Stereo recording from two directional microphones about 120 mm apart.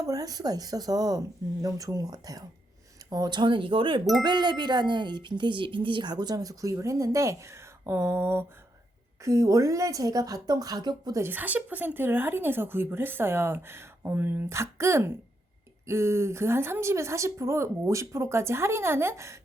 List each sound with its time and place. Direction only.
0.0 s a woman's voice: 30° right (ahead or behind)
11.2 s a woman's voice: 15° right (ahead or behind)